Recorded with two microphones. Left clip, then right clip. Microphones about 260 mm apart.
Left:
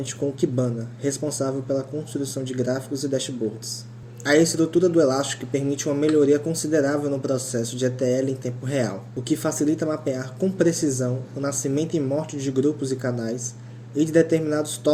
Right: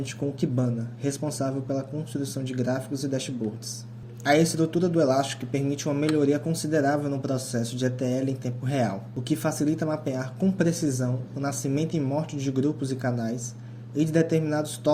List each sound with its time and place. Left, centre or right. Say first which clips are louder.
0.5 s speech: left 4 dB; right
4.2 s speech: left 3 dB; right